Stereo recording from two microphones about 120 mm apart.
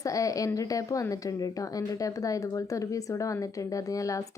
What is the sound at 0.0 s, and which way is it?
A woman's voice, 30° left (ahead or behind).